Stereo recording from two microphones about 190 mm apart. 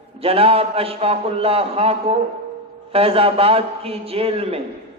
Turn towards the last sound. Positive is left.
turn(degrees=-30)  # may be behind; listen again after turning